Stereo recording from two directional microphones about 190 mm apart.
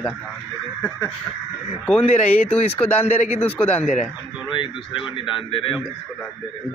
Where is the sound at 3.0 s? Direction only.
35° left (ahead or behind).